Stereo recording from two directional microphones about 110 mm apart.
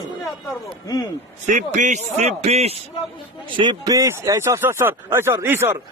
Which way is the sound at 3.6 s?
40° right (ahead or behind).